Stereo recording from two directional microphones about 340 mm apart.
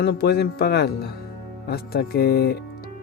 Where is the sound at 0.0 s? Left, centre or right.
Left.